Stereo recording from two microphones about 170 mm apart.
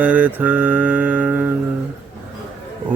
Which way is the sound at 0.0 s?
10° right (ahead or behind).